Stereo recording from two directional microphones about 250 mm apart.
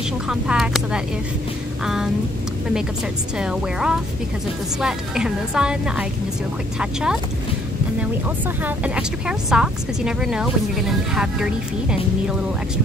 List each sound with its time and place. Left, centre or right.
0.3 s a woman's voice: centre
3.3 s a woman's voice: centre
8.6 s a woman's voice: centre